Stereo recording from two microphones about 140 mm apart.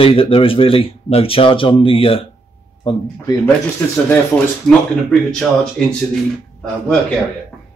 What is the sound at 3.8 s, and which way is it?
Speech, 10° left (ahead or behind).